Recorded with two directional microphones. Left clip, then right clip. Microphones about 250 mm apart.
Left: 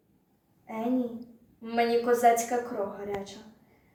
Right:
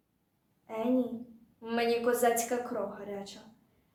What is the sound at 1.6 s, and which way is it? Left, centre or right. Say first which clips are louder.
Child singing: left 4 dB; centre.